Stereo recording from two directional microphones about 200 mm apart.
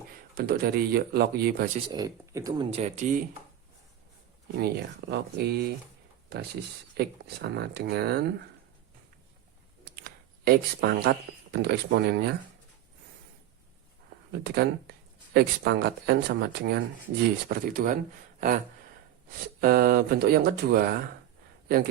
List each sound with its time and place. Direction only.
0.3 s speech: 50° right (ahead or behind)
1.9 s speech: 15° right (ahead or behind); by 3.2 s 40° right (ahead or behind)
4.6 s speech: 55° right (ahead or behind)
9.9 s a sound: 50° right (ahead or behind)
11.5 s speech: 55° right (ahead or behind)
14.4 s speech: 55° right (ahead or behind)
18.3 s a sound: 40° right (ahead or behind)
19.6 s speech: 45° right (ahead or behind)